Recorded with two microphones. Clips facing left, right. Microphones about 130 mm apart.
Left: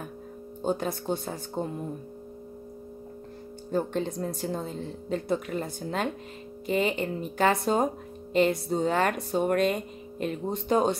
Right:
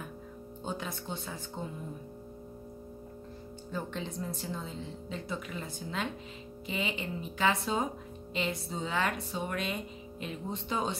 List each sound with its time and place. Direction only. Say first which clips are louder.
0.7 s speech: left 10 dB; 45° left (ahead or behind)
3.7 s speech: left 9 dB; 50° left (ahead or behind)